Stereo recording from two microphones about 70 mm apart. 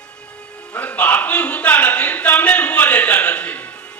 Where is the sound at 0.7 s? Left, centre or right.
Left.